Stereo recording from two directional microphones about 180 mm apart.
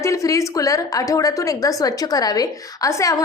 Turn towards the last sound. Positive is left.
turn(degrees=15)  # may be behind; listen again after turning